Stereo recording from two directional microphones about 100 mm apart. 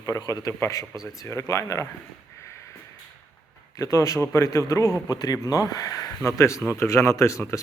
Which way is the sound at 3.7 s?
30° left (ahead or behind).